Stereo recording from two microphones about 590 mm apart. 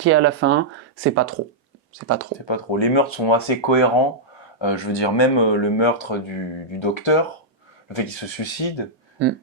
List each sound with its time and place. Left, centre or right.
0.0 s speech: centre
2.5 s speech: left